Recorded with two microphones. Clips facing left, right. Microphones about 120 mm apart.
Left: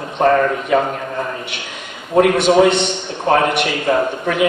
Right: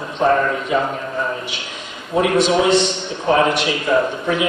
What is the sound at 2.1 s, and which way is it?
A man's voice, 55° left (ahead or behind).